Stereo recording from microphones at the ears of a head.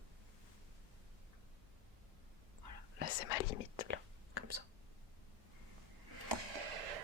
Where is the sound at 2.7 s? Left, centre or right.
Left.